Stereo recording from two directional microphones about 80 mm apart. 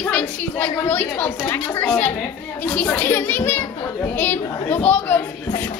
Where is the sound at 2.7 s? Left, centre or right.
Centre.